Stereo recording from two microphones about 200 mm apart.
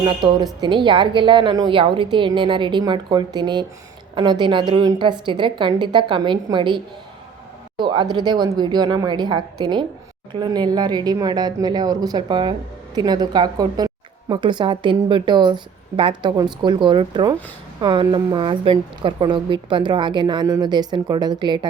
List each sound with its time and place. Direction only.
0.0 s speech: 25° right (ahead or behind)